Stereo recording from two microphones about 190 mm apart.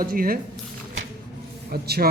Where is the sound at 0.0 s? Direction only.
50° right (ahead or behind).